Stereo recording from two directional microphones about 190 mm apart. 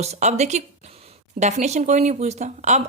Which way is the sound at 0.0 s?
35° right (ahead or behind).